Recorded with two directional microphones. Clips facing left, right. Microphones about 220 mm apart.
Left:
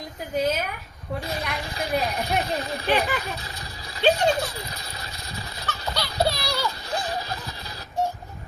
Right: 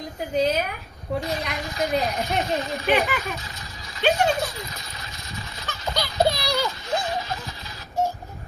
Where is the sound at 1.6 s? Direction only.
30° left (ahead or behind).